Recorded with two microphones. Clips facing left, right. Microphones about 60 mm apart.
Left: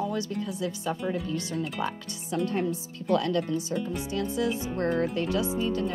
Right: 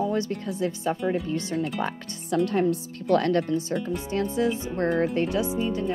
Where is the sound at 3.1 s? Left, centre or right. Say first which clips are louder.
Right 4 dB; right.